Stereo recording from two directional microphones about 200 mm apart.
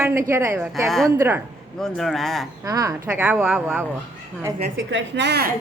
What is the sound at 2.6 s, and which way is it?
Speech, 20° right (ahead or behind).